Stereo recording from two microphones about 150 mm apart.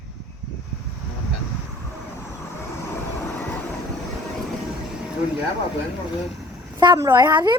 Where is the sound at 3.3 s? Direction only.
15° left (ahead or behind).